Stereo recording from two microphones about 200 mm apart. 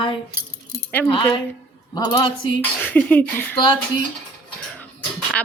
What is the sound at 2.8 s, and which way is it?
Speech, 10° left (ahead or behind).